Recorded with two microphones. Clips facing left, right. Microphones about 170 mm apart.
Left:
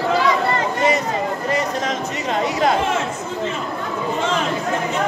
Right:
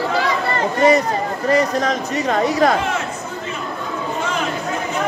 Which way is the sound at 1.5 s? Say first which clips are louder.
Right 8 dB; 35° right (ahead or behind).